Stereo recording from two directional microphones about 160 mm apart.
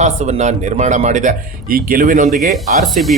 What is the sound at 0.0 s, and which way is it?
Speech, 45° right (ahead or behind).